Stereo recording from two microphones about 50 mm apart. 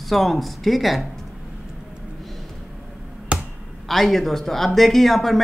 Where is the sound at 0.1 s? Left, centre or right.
Centre.